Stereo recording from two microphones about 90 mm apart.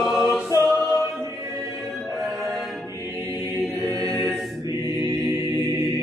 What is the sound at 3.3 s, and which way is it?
Choir, 45° left (ahead or behind).